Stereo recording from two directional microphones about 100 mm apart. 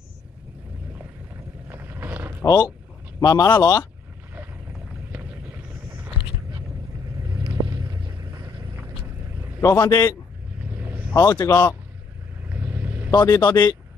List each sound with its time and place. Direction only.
1.7 s boat: 20° right (ahead or behind)
2.4 s a man's voice: 45° left (ahead or behind)
5.1 s a sound: 15° right (ahead or behind)
7.2 s vehicle: 40° right (ahead or behind)
9.6 s speech: 35° left (ahead or behind)
10.6 s vehicle: 15° right (ahead or behind)
11.1 s speech: 35° left (ahead or behind)
12.4 s vehicle: 15° right (ahead or behind)
13.1 s a man's voice: 45° left (ahead or behind)